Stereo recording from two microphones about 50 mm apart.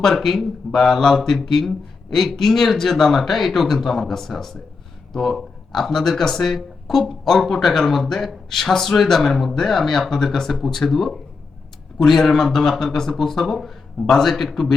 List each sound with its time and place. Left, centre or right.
0.0 s speech: centre